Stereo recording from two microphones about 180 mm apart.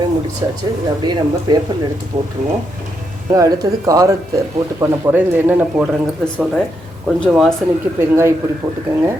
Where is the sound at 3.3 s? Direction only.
20° right (ahead or behind).